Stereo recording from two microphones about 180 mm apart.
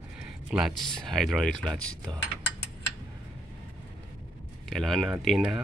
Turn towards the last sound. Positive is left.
turn(degrees=-5)  # may be behind; listen again after turning